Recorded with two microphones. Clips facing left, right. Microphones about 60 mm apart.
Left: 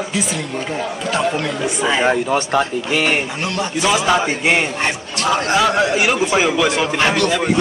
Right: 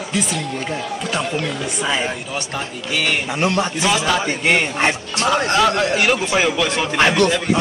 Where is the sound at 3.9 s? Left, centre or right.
Centre.